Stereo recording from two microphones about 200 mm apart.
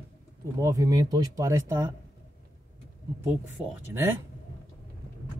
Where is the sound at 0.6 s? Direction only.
15° right (ahead or behind).